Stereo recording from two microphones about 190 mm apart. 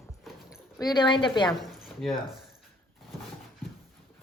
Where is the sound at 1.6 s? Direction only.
Centre (ahead or behind).